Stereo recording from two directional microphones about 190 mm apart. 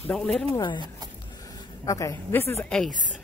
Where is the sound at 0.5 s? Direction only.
25° left (ahead or behind).